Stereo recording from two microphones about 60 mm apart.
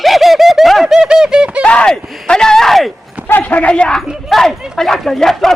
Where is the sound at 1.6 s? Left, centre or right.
Centre.